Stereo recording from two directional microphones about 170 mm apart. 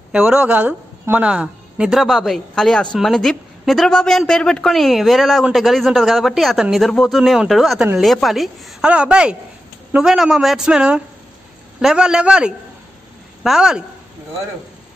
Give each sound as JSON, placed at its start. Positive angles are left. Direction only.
{"t": 0.1, "sound": "speech", "side_deg": -5}